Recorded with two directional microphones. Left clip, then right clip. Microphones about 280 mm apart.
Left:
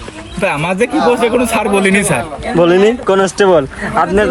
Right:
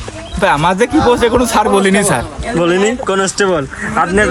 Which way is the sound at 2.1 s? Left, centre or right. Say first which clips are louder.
Left 2 dB; centre.